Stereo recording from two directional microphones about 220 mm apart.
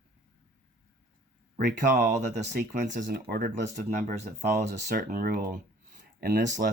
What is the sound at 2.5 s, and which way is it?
Speech, 35° right (ahead or behind).